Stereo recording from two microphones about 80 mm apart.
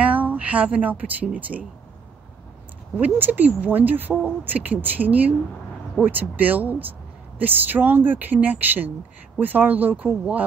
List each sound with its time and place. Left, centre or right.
0.0 s speech: right
3.0 s speech: right